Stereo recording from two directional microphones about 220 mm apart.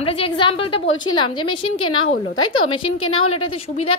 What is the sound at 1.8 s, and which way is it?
A woman's voice, 75° left (ahead or behind).